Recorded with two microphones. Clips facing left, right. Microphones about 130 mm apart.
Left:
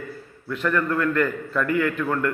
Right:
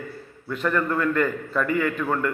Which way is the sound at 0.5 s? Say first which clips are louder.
Left 1 dB; 5° right (ahead or behind).